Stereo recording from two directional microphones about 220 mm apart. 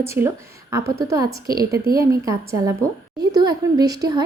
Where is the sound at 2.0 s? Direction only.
15° right (ahead or behind).